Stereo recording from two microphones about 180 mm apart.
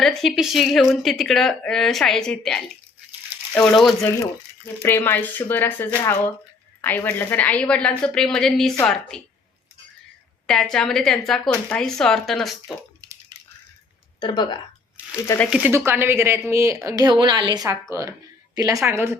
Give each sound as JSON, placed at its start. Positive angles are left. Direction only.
{"t": 0.0, "sound": "a woman's voice", "side_deg": 0}
{"t": 10.4, "sound": "a woman's voice", "side_deg": 5}
{"t": 14.2, "sound": "speech", "side_deg": 25}
{"t": 15.4, "sound": "a woman's voice", "side_deg": -5}